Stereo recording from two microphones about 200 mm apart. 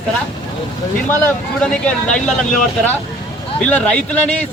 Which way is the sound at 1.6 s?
5° left (ahead or behind).